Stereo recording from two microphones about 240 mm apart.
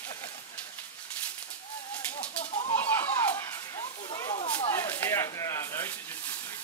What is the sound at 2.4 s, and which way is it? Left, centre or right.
Chicken, left.